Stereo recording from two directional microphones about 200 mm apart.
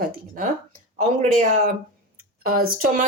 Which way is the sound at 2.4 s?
45° right (ahead or behind).